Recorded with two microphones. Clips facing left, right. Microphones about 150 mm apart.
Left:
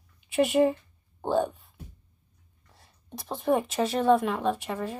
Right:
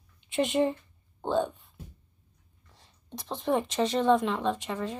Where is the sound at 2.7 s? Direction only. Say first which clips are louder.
Even; 10° left (ahead or behind).